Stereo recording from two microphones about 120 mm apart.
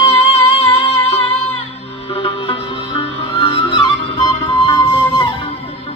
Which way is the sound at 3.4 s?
50° left (ahead or behind).